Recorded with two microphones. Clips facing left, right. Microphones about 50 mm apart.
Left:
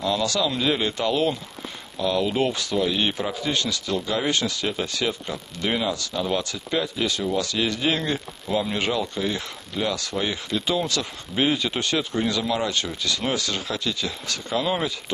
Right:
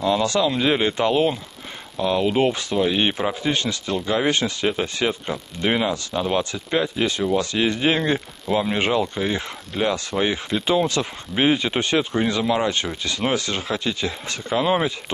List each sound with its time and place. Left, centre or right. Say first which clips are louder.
0.0 s speech: right 4 dB; right